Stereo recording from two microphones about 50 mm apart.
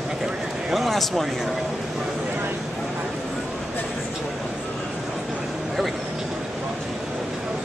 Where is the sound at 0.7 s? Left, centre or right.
Centre.